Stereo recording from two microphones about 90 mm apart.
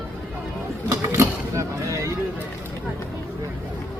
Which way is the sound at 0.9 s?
35° right (ahead or behind).